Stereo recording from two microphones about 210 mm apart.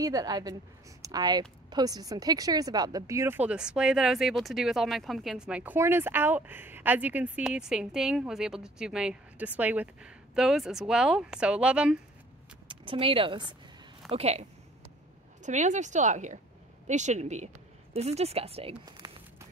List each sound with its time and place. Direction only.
0.0 s a woman's voice: 15° right (ahead or behind)
12.6 s speech: 25° right (ahead or behind)
15.4 s speech: 35° right (ahead or behind); by 19.1 s 20° right (ahead or behind)